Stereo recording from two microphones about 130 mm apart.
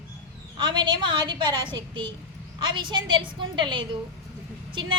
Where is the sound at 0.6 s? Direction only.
35° right (ahead or behind).